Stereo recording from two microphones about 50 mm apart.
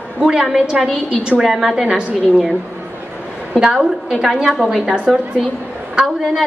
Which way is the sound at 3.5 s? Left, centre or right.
Centre.